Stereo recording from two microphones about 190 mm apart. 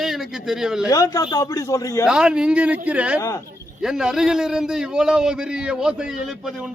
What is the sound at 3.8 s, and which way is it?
A man's voice, 5° right (ahead or behind).